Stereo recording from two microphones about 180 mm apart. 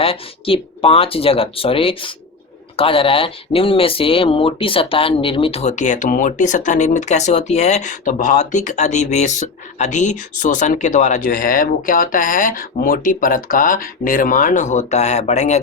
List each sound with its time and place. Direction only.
0.0 s speech: 30° left (ahead or behind)